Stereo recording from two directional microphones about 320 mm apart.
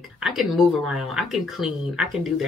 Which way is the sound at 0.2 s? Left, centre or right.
Centre.